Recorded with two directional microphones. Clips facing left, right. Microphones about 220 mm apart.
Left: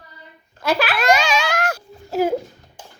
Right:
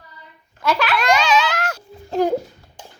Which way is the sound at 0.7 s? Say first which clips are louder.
Even; 35° left (ahead or behind).